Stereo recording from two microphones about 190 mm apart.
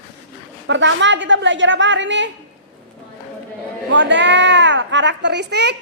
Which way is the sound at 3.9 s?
70° right (ahead or behind).